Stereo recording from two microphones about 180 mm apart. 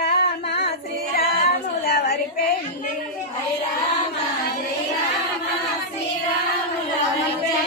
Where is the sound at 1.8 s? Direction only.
55° left (ahead or behind).